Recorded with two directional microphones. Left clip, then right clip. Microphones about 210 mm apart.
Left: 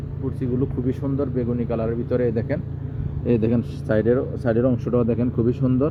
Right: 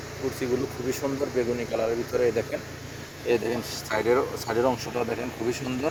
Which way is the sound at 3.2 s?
10° left (ahead or behind).